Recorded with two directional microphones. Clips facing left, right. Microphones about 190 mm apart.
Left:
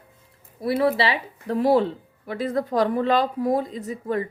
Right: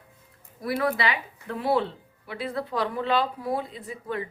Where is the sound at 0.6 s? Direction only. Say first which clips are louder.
Left 5 dB; 25° left (ahead or behind).